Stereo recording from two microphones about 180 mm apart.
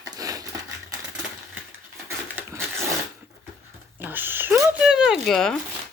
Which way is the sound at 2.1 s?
15° right (ahead or behind).